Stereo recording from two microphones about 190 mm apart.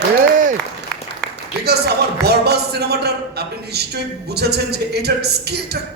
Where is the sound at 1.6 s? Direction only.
60° right (ahead or behind).